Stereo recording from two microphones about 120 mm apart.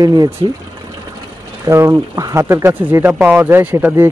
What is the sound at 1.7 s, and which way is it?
Speech, 25° right (ahead or behind).